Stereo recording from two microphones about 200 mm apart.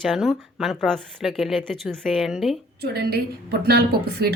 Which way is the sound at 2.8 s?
50° right (ahead or behind).